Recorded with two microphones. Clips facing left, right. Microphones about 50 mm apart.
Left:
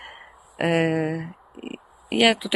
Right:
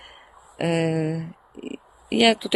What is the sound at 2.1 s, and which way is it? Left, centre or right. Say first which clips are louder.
Speech: right 1 dB; centre.